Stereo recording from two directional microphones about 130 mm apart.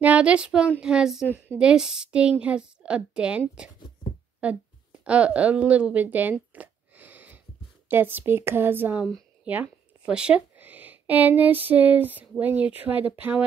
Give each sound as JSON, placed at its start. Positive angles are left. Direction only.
{"t": 0.0, "sound": "a woman's voice", "side_deg": -10}
{"t": 5.0, "sound": "a sound", "side_deg": -10}
{"t": 7.9, "sound": "a woman's voice", "side_deg": -15}